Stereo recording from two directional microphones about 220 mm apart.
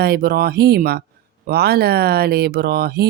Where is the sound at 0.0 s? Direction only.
45° right (ahead or behind).